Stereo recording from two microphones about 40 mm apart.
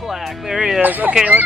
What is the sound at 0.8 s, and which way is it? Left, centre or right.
Speech, right.